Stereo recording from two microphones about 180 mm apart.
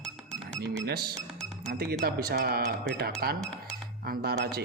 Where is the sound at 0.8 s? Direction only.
60° right (ahead or behind).